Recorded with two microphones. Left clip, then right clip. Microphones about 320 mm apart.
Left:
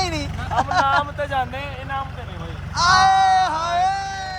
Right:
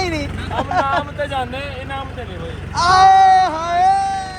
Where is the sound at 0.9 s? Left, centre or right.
Left.